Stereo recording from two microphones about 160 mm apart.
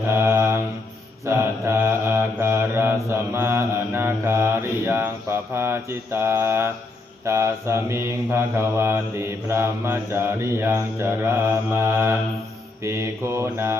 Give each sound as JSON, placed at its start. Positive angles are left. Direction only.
{"t": 0.1, "sound": "mantra", "side_deg": -15}